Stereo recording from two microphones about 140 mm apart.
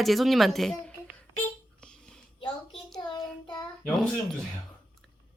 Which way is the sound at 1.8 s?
5° left (ahead or behind).